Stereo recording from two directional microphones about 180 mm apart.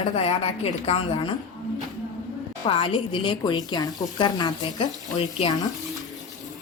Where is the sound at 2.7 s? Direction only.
30° left (ahead or behind).